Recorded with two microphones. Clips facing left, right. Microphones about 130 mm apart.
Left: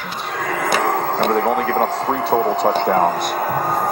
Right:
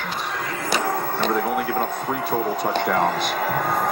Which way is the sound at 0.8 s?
90° left.